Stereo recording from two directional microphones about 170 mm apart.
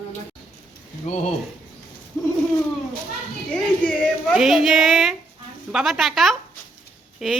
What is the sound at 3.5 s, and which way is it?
A woman's voice, centre (ahead or behind).